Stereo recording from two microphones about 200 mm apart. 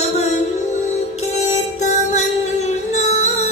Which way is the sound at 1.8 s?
35° left (ahead or behind).